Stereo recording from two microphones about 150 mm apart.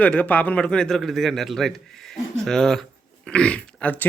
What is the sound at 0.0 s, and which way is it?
A man's voice, 10° left (ahead or behind).